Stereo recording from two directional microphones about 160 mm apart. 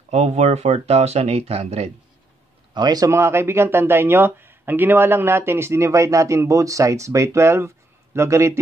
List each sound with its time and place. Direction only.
0.1 s speech: 45° right (ahead or behind)
2.7 s speech: 25° right (ahead or behind)